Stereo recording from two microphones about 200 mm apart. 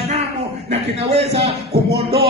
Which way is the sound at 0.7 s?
30° right (ahead or behind).